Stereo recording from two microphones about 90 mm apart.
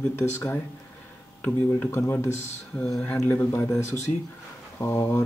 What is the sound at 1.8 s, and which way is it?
Speech, 30° left (ahead or behind).